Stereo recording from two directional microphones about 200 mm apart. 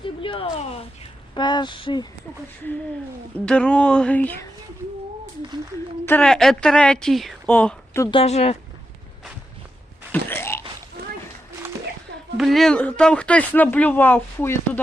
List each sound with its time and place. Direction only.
0.0 s a sound: 25° left (ahead or behind)
1.4 s speech: 20° left (ahead or behind)
3.3 s speech: 5° left (ahead or behind)
6.1 s a woman's voice: 5° left (ahead or behind)
8.0 s speech: 30° left (ahead or behind)
10.1 s a sound: 10° left (ahead or behind)
12.4 s speech: centre (ahead or behind)